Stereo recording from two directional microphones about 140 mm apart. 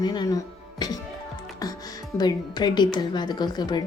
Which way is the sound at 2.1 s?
30° left (ahead or behind).